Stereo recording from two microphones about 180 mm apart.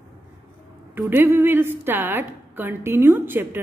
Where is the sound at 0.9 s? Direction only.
10° right (ahead or behind).